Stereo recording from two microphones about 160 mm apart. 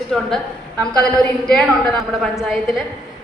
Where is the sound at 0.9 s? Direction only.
5° left (ahead or behind).